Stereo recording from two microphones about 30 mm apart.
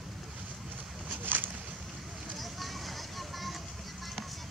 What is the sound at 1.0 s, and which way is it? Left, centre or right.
Boat, right.